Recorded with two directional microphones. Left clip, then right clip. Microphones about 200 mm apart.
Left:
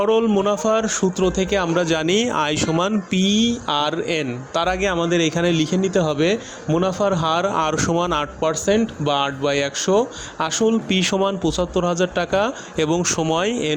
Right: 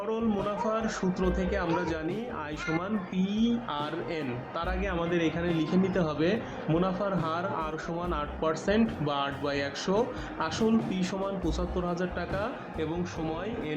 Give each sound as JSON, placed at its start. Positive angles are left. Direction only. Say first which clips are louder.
{"t": 0.0, "sound": "speech", "louder": "left 13 dB", "side_deg": 50}
{"t": 2.0, "sound": "speech", "louder": "left 16 dB", "side_deg": 60}